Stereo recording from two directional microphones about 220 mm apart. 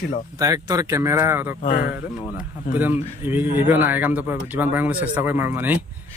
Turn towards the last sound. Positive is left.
turn(degrees=-10)  # may be behind; listen again after turning